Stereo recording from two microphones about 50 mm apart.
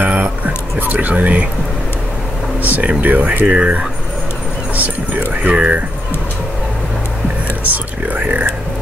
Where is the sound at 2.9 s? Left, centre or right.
Right.